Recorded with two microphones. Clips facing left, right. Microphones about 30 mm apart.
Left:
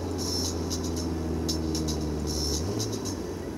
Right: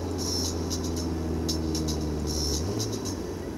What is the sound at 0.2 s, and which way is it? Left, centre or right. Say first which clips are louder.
Vehicle: even; centre.